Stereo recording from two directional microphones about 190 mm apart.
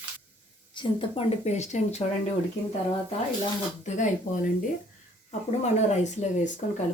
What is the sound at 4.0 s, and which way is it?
Speech, 45° left (ahead or behind).